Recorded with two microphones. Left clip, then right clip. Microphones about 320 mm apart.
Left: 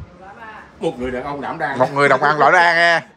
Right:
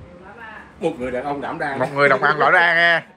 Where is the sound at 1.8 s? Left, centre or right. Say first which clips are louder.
Left 2 dB; centre.